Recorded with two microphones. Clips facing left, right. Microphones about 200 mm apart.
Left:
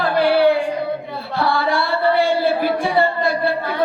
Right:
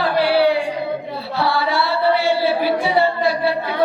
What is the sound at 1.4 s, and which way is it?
Music, 50° left (ahead or behind).